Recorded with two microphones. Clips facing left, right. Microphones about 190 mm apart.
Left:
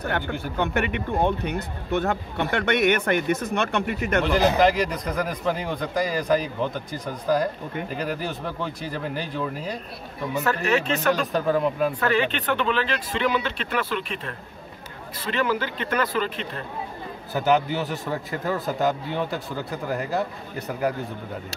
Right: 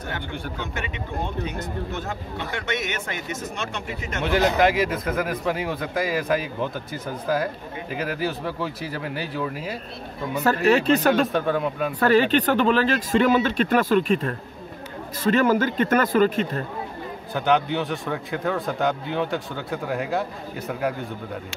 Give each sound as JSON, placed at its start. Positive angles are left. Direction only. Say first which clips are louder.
{"t": 0.6, "sound": "speech", "louder": "left 7 dB", "side_deg": 60}
{"t": 4.2, "sound": "a man's voice", "louder": "even", "side_deg": 0}
{"t": 10.4, "sound": "speech", "louder": "right 5 dB", "side_deg": -35}
{"t": 11.3, "sound": "a man's voice", "louder": "left 1 dB", "side_deg": 0}
{"t": 12.0, "sound": "speech", "louder": "right 5 dB", "side_deg": -40}
{"t": 17.3, "sound": "a man's voice", "louder": "even", "side_deg": 5}